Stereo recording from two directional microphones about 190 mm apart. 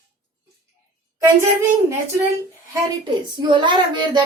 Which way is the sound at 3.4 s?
25° right (ahead or behind).